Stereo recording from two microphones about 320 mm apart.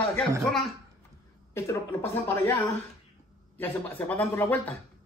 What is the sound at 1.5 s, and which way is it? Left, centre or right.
Speech, centre.